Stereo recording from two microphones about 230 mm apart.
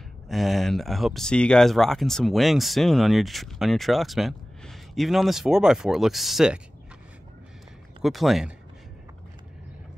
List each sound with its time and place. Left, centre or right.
0.3 s speech: centre
8.0 s speech: centre